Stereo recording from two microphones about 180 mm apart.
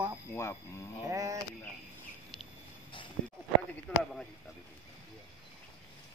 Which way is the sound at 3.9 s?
10° left (ahead or behind).